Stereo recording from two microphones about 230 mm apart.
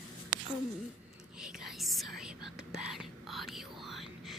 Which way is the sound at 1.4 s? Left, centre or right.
Centre.